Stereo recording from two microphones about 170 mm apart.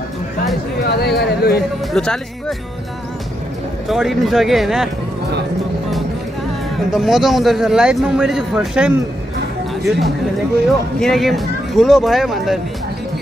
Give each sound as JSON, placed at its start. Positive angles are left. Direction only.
{"t": 0.7, "sound": "speech", "side_deg": 75}
{"t": 2.0, "sound": "a man's voice", "side_deg": 5}
{"t": 3.9, "sound": "a man's voice", "side_deg": 0}
{"t": 6.9, "sound": "a man's voice", "side_deg": 0}